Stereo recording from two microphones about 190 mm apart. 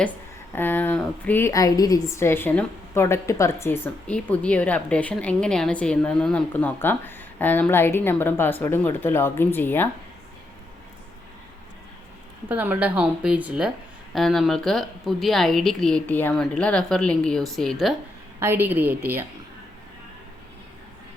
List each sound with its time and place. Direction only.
0.5 s a woman's voice: 10° left (ahead or behind)
12.5 s a woman's voice: 10° right (ahead or behind)
18.3 s speech: 10° right (ahead or behind)